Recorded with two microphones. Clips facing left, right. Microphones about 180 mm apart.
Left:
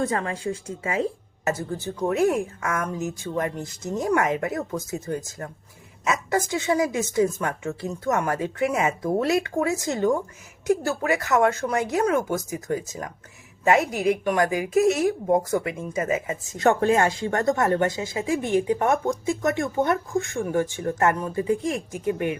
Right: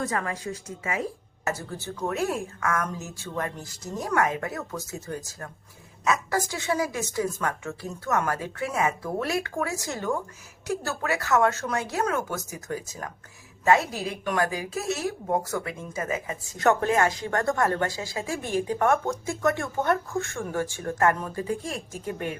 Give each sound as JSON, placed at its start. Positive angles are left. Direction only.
{"t": 0.0, "sound": "speech", "side_deg": 25}
{"t": 1.5, "sound": "speech", "side_deg": 20}